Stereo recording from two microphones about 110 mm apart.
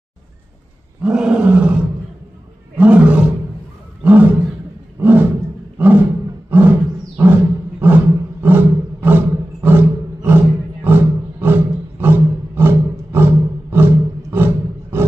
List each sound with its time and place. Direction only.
1.0 s roar: 10° right (ahead or behind)
2.8 s roar: 10° right (ahead or behind)
5.0 s roaring cats: 20° right (ahead or behind)
6.5 s roar: 20° right (ahead or behind)